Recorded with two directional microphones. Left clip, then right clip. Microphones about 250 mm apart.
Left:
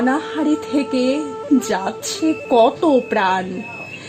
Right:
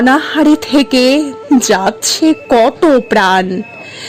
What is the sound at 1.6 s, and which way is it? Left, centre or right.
Speech, right.